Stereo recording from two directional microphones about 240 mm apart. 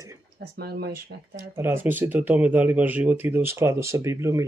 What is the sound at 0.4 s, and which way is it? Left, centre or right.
Speech, right.